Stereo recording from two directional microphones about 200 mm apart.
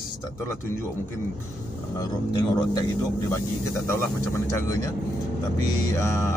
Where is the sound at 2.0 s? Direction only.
20° left (ahead or behind).